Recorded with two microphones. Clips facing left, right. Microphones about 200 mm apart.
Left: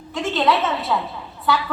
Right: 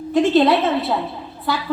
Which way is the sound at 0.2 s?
35° right (ahead or behind).